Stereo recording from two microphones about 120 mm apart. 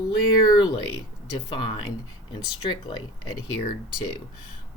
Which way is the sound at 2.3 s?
45° left (ahead or behind).